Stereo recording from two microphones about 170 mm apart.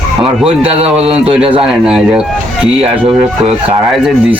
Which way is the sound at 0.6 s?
35° right (ahead or behind).